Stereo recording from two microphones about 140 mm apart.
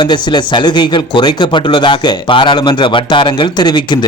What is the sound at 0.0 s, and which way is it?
Speech, 35° left (ahead or behind).